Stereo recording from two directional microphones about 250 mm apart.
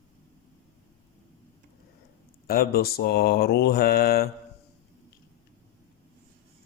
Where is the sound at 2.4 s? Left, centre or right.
Left.